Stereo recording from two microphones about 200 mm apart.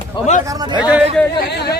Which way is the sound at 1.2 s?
5° left (ahead or behind).